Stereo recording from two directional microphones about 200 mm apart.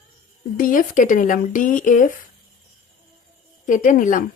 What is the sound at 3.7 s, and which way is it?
Speech, 40° left (ahead or behind).